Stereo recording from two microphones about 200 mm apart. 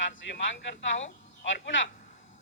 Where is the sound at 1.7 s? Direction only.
70° left (ahead or behind).